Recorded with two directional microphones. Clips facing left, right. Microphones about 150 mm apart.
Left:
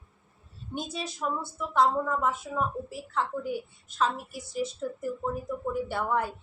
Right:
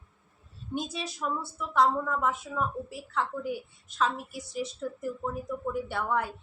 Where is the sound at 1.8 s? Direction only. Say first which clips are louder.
Left 1 dB; 25° left (ahead or behind).